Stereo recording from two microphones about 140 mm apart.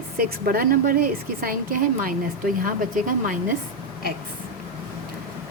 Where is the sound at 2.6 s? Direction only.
75° right (ahead or behind).